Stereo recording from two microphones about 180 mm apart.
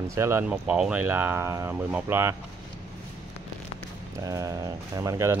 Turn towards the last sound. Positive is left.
turn(degrees=-15)  # may be behind; listen again after turning